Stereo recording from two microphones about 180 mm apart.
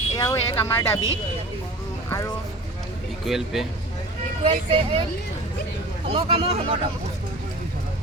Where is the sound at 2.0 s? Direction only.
15° left (ahead or behind).